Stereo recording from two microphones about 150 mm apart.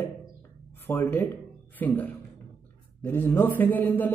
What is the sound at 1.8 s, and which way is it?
A man's voice, 10° left (ahead or behind).